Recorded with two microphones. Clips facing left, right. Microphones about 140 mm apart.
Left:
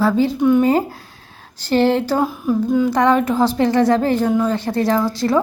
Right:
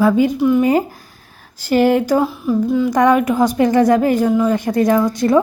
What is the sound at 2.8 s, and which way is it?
A woman's voice, 15° right (ahead or behind).